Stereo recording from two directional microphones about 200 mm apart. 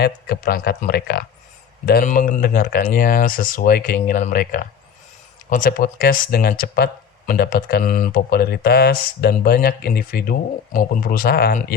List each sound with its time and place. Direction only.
0.0 s speech: 50° left (ahead or behind)